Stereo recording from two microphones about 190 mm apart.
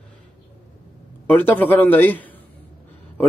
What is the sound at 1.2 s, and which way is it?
Speech, 10° left (ahead or behind).